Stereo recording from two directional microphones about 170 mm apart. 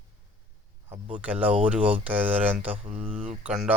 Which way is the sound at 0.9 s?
45° right (ahead or behind).